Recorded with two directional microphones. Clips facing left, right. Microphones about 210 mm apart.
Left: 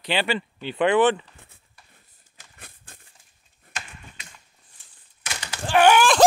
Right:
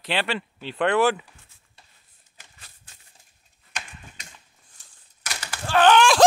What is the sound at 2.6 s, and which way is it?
Crumpling, 55° left (ahead or behind).